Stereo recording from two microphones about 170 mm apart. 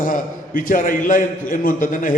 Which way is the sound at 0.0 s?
55° left (ahead or behind).